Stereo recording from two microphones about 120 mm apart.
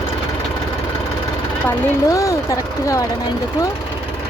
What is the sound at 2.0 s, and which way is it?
Speech, 25° left (ahead or behind).